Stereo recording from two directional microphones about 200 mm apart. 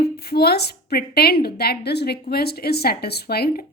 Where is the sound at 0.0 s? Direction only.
50° left (ahead or behind).